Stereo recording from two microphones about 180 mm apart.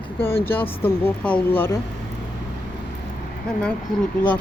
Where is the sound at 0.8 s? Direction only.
10° left (ahead or behind).